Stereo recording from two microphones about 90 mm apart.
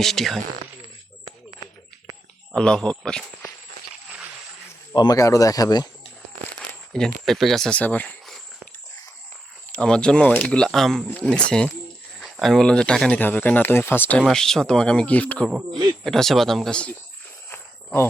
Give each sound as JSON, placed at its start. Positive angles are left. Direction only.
{"t": 0.0, "sound": "speech", "side_deg": 5}
{"t": 2.5, "sound": "speech", "side_deg": 10}
{"t": 5.1, "sound": "speech", "side_deg": 40}
{"t": 6.9, "sound": "speech", "side_deg": 5}
{"t": 7.8, "sound": "speech", "side_deg": 15}
{"t": 9.7, "sound": "speech", "side_deg": 10}
{"t": 13.1, "sound": "speech", "side_deg": 20}
{"t": 14.2, "sound": "speech", "side_deg": 5}
{"t": 16.0, "sound": "speech", "side_deg": 5}
{"t": 17.5, "sound": "cricket", "side_deg": 25}